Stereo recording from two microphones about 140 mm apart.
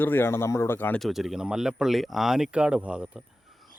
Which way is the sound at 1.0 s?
Centre (ahead or behind).